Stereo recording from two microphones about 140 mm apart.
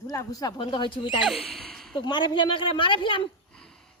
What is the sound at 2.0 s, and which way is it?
A woman's voice, 30° left (ahead or behind).